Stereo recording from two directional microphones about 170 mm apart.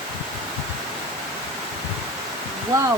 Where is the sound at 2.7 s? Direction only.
20° right (ahead or behind).